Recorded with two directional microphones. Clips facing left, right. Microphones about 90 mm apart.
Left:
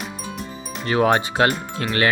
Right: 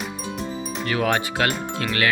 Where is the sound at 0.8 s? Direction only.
30° left (ahead or behind).